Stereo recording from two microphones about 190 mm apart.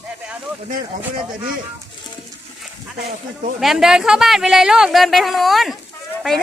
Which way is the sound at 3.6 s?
Centre (ahead or behind).